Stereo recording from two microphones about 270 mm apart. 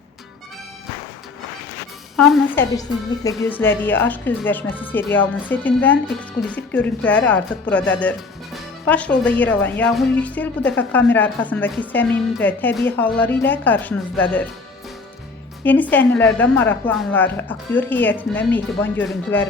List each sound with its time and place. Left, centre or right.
2.1 s a woman's voice: centre
15.6 s a woman's voice: centre